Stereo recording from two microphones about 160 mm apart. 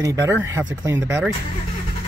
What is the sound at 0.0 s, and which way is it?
Speech, 15° right (ahead or behind).